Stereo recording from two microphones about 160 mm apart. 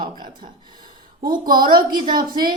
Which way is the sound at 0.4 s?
35° right (ahead or behind).